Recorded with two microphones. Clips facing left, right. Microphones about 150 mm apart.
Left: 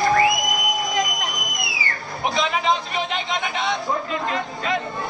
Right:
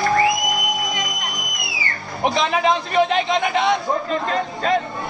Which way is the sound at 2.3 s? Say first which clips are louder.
Right 2 dB; 45° right (ahead or behind).